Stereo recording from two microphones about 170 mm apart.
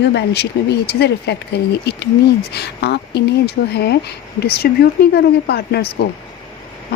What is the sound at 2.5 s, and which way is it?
Speech, 75° left (ahead or behind).